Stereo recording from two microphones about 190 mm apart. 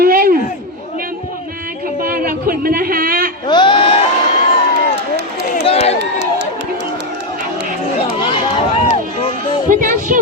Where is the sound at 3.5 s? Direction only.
25° left (ahead or behind).